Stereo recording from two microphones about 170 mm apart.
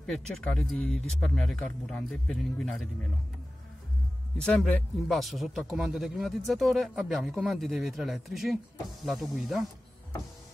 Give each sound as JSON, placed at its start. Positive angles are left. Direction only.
{"t": 0.0, "sound": "speech", "side_deg": 5}
{"t": 4.4, "sound": "speech", "side_deg": 5}